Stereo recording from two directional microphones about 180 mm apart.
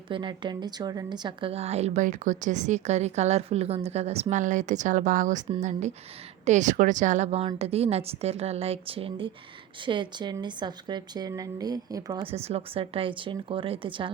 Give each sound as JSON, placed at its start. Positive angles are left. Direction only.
{"t": 0.1, "sound": "a woman's voice", "side_deg": -25}
{"t": 12.2, "sound": "a woman's voice", "side_deg": -35}